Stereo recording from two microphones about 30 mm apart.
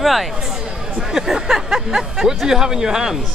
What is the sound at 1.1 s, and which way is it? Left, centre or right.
A woman's voice, centre.